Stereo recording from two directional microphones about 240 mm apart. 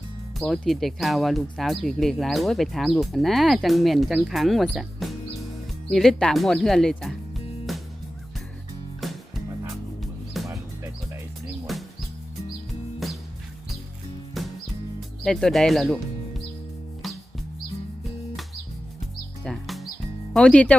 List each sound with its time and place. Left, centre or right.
0.3 s speech: centre
7.7 s music: centre
9.0 s music: centre
11.6 s music: centre
14.4 s music: centre
15.2 s speech: centre
19.5 s music: centre
20.3 s speech: centre